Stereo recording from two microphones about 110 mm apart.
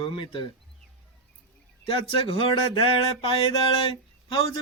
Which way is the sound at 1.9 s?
55° left (ahead or behind).